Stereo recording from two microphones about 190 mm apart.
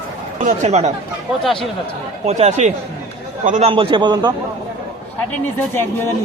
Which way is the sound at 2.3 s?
35° right (ahead or behind).